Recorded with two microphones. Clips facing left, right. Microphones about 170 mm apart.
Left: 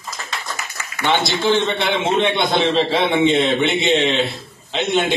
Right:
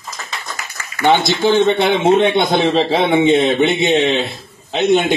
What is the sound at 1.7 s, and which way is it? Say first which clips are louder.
A man's voice: right 6 dB; 45° right (ahead or behind).